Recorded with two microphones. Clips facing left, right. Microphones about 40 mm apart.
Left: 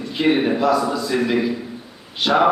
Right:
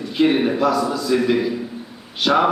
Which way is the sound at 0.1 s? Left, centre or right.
Centre.